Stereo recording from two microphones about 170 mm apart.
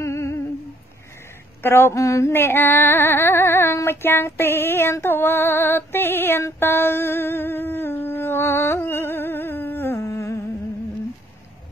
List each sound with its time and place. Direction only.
0.0 s humming: 15° left (ahead or behind)
1.6 s female singing: 15° left (ahead or behind)